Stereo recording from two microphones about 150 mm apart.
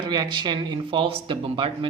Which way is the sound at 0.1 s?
30° right (ahead or behind).